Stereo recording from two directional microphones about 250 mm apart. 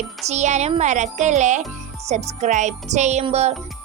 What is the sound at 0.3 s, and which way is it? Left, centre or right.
Music, right.